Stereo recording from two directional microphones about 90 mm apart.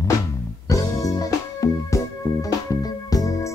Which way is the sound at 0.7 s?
40° left (ahead or behind).